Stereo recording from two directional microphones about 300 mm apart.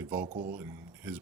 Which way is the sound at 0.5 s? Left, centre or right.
Centre.